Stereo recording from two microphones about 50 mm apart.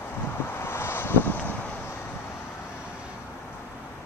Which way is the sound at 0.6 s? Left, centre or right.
Left.